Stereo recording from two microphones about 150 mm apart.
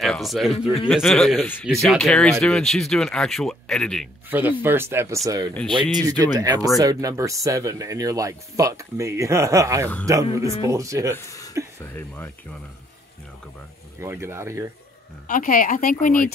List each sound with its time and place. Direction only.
0.0 s speech: centre (ahead or behind)
4.3 s speech: 10° right (ahead or behind)
11.1 s a sound: 20° left (ahead or behind)
11.8 s speech: 15° left (ahead or behind)
13.9 s speech: 15° right (ahead or behind)
15.2 s speech: 65° left (ahead or behind)